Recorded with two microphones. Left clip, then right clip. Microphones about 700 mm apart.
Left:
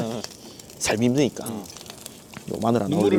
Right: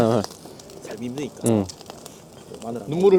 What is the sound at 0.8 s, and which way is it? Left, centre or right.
Speech, left.